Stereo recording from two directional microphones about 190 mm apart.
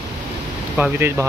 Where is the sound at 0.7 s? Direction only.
10° right (ahead or behind).